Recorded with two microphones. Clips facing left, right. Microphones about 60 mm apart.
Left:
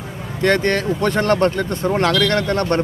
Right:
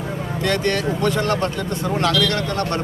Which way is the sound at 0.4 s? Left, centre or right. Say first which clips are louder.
Left 4 dB; left.